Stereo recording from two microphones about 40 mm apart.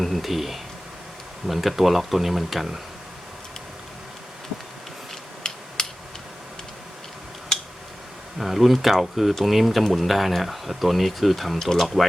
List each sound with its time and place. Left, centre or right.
0.0 s speech: centre
5.5 s a sound: centre
8.4 s speech: centre
11.6 s speech: centre